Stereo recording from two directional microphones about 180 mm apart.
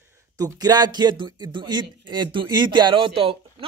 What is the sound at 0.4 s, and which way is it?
A man's voice, 20° right (ahead or behind).